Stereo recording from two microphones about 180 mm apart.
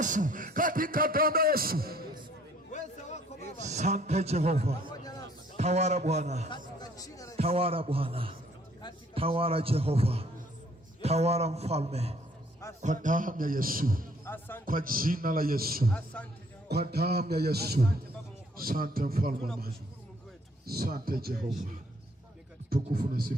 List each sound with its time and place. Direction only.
0.0 s speech: 45° right (ahead or behind)
3.6 s a man's voice: 40° right (ahead or behind)
6.7 s speech: 20° left (ahead or behind)
7.3 s a man's voice: 35° right (ahead or behind); by 14.1 s 50° right (ahead or behind)
14.3 s speech: 10° left (ahead or behind)
14.6 s speech: 50° right (ahead or behind)
15.9 s speech: 5° left (ahead or behind)
16.9 s a man's voice: 60° right (ahead or behind)
20.7 s a man's voice: 55° right (ahead or behind)
22.7 s a man's voice: 55° right (ahead or behind)